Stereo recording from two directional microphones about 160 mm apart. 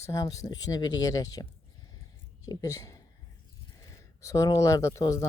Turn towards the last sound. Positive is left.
turn(degrees=20)  # may be behind; listen again after turning